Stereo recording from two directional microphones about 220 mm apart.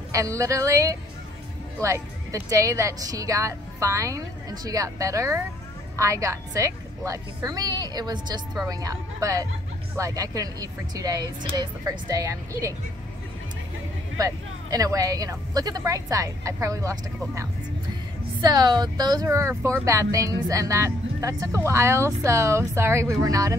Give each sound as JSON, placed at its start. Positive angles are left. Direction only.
{"t": 0.1, "sound": "speech", "side_deg": -15}
{"t": 14.1, "sound": "speech", "side_deg": -15}